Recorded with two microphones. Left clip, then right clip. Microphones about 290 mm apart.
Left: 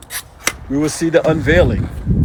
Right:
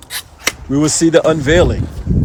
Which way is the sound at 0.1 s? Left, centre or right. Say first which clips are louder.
Right 2 dB; right.